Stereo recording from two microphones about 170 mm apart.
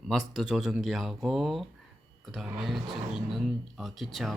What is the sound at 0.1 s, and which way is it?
Speech, centre (ahead or behind).